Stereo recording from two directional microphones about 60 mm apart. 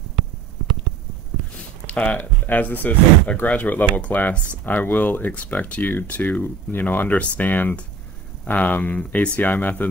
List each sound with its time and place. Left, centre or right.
1.9 s speech: left